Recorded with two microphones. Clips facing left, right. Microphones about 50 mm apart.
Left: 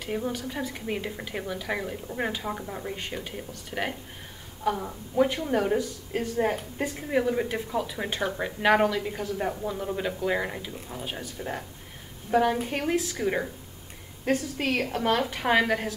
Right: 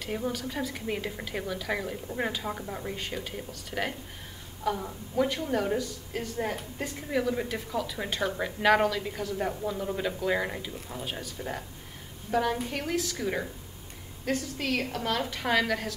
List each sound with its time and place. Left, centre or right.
0.0 s a woman's voice: centre
12.3 s a woman's voice: centre